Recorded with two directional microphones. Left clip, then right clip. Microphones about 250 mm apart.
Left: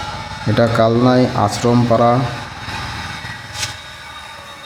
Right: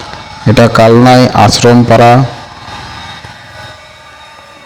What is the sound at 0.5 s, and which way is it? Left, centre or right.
Speech, right.